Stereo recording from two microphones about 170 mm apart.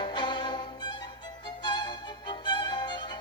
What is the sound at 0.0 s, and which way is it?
Music, 25° left (ahead or behind).